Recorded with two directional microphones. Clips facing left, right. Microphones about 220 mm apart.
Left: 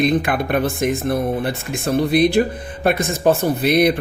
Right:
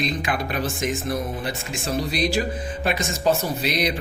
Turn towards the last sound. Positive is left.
turn(degrees=55)  # may be behind; listen again after turning